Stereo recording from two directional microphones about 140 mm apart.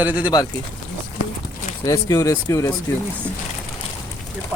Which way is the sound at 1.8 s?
25° left (ahead or behind).